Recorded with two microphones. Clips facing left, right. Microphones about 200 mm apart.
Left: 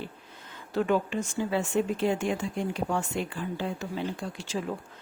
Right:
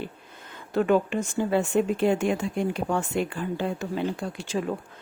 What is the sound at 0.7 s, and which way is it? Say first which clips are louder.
Speech: right 4 dB; 55° right (ahead or behind).